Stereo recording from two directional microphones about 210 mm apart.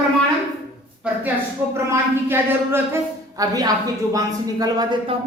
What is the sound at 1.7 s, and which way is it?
A man's voice, 10° right (ahead or behind).